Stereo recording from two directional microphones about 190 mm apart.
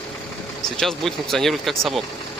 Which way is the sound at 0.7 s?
Centre (ahead or behind).